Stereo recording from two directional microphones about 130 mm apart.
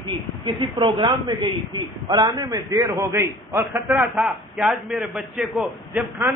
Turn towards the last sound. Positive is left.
turn(degrees=-15)  # may be behind; listen again after turning